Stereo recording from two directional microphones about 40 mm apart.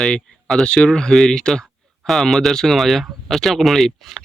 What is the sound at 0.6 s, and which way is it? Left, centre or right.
Speech, left.